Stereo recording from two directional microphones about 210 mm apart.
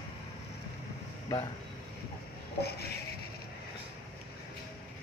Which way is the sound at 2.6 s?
50° left (ahead or behind).